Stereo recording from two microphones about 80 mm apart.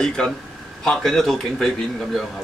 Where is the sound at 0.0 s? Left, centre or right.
Centre.